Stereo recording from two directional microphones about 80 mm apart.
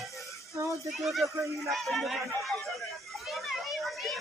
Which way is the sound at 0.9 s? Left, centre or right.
Centre.